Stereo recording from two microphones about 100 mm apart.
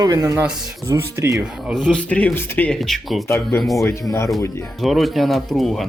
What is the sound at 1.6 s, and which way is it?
Speech, 5° right (ahead or behind).